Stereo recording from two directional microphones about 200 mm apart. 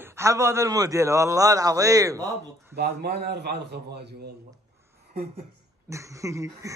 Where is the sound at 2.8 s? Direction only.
50° right (ahead or behind).